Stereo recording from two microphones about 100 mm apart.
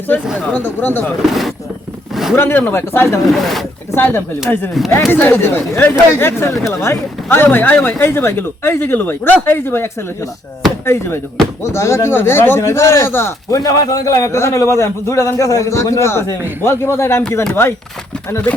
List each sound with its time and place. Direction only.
0.1 s speech: 20° left (ahead or behind)
1.3 s speech: centre (ahead or behind)
2.3 s speech: 20° left (ahead or behind)
3.2 s speech: centre (ahead or behind)
3.9 s speech: 20° left (ahead or behind)
13.5 s a man's voice: 35° left (ahead or behind)